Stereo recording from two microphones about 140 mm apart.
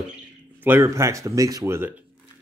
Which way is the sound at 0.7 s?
20° right (ahead or behind).